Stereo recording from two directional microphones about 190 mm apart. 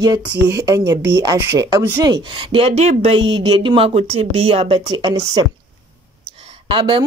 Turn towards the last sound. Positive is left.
turn(degrees=-25)  # may be behind; listen again after turning